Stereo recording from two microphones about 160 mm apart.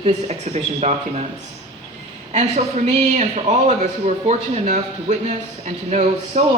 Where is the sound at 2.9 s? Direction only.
45° right (ahead or behind).